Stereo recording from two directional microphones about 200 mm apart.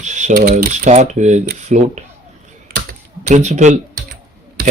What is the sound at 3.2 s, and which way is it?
Speech, 35° right (ahead or behind).